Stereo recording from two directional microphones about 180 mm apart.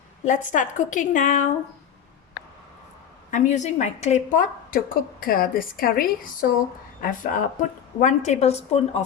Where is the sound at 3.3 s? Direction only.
40° left (ahead or behind).